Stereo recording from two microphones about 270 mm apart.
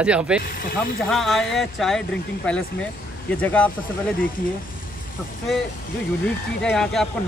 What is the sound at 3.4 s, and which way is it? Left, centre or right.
Speech, centre.